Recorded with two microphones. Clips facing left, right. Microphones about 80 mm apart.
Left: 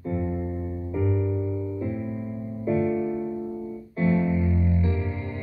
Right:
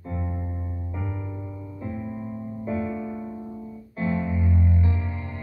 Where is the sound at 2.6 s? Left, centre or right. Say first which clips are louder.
Left 6 dB; right.